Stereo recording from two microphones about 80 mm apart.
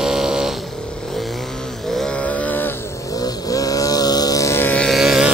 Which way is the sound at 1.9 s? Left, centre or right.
Centre.